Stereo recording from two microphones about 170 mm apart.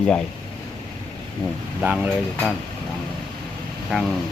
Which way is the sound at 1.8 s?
5° right (ahead or behind).